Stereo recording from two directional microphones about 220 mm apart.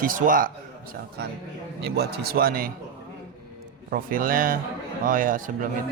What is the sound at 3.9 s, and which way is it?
Speech, 40° right (ahead or behind).